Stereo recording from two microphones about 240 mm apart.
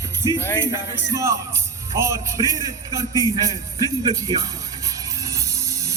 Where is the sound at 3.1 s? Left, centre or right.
Centre.